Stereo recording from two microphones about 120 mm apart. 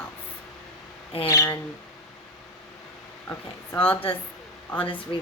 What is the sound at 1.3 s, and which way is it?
Speech, 25° left (ahead or behind).